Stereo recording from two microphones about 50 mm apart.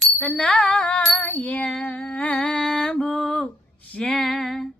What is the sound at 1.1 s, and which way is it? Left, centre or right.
Music, left.